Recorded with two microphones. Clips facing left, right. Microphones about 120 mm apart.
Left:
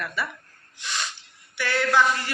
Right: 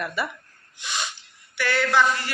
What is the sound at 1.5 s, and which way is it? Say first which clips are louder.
Speech: right 2 dB; 15° left (ahead or behind).